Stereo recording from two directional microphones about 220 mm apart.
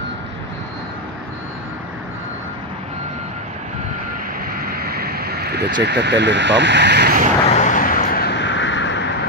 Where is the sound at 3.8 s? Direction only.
40° right (ahead or behind).